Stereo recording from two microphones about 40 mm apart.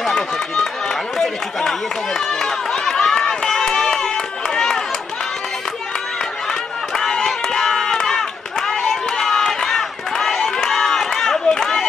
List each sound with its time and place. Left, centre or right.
1.1 s run: centre
7.0 s run: centre